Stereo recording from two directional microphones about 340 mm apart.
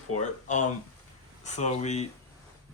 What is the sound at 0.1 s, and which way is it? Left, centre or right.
Speech, left.